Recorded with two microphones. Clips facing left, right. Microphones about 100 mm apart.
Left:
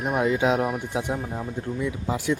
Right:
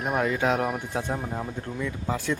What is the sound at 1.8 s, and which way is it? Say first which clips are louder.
Speech: left 2 dB; 15° left (ahead or behind).